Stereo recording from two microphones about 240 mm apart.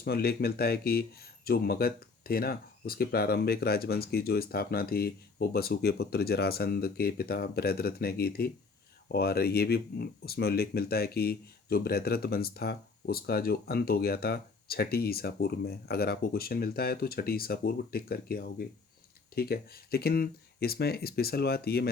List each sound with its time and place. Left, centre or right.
0.0 s speech: left